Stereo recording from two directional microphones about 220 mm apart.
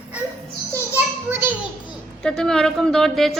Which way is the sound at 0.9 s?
10° right (ahead or behind).